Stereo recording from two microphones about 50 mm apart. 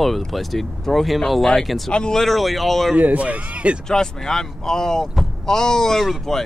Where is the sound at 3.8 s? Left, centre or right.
Centre.